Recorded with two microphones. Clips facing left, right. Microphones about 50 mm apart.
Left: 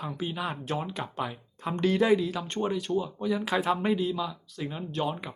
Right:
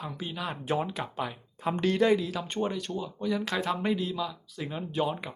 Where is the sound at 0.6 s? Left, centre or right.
Centre.